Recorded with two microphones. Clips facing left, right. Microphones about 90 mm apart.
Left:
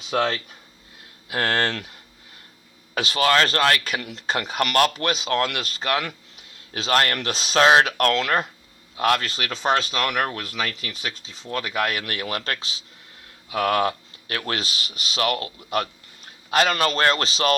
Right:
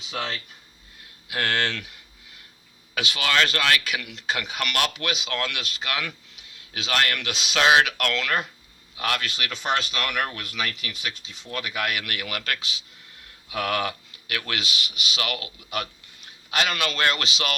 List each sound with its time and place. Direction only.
0.1 s speech: 55° left (ahead or behind)
1.3 s speech: 35° left (ahead or behind)